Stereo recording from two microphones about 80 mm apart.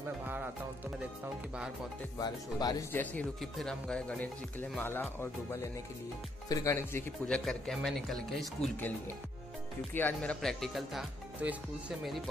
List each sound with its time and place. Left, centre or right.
0.2 s music: right
2.1 s speech: left
2.9 s speech: left
3.3 s speech: centre
4.6 s speech: left
5.2 s speech: left
7.2 s speech: centre
9.9 s speech: left
10.4 s speech: centre
11.4 s speech: centre